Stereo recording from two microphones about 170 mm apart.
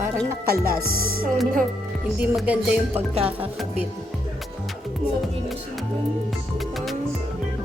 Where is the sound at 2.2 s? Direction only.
10° right (ahead or behind).